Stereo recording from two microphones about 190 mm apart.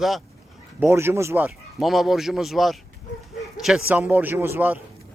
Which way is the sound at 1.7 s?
Centre (ahead or behind).